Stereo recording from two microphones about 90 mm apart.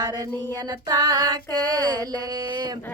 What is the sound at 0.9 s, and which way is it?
Female singing, 50° right (ahead or behind).